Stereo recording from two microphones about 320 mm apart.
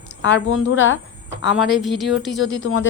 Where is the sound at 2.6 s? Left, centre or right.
Left.